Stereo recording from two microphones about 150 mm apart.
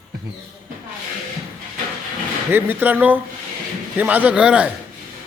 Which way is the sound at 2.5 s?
15° right (ahead or behind).